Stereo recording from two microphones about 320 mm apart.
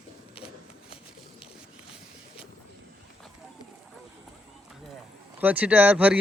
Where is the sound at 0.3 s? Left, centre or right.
Centre.